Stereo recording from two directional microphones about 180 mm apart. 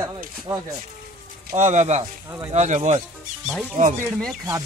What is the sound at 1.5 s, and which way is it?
Speech, 40° right (ahead or behind).